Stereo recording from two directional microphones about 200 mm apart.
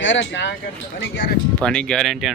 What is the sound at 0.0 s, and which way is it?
Speech, 70° left (ahead or behind).